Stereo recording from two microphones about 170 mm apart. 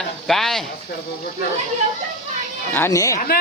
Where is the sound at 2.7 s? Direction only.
15° left (ahead or behind).